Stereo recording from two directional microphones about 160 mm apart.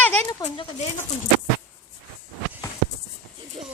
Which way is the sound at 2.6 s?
25° left (ahead or behind).